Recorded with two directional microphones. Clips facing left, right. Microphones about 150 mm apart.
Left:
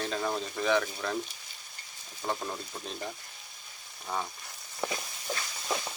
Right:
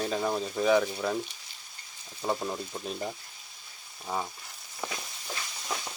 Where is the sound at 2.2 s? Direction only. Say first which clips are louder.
Right 3 dB; 5° right (ahead or behind).